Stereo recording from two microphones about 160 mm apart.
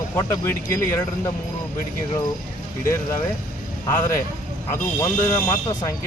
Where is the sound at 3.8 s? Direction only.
15° left (ahead or behind).